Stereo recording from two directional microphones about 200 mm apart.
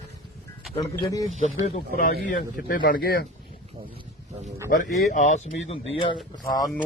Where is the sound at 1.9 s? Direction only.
45° left (ahead or behind).